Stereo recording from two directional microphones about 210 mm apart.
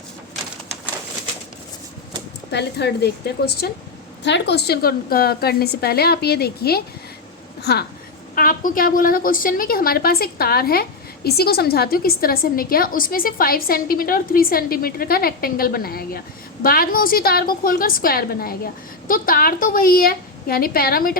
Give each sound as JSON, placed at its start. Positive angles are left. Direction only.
{"t": 2.5, "sound": "a woman's voice", "side_deg": 50}